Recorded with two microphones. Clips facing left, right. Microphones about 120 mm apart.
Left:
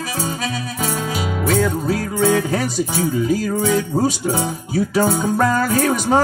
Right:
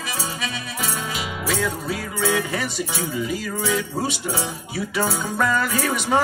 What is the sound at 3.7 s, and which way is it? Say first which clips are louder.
Music: left 6 dB; 45° left (ahead or behind).